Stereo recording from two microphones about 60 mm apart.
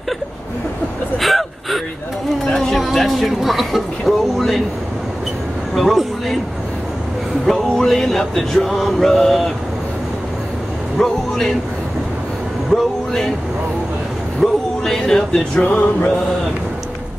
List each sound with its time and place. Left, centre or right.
1.1 s gasp: centre
2.4 s music: centre
2.8 s a sound: centre
5.8 s speech: centre
7.4 s music: centre
11.0 s music: centre
12.7 s speech: centre
14.4 s speech: centre
15.6 s music: left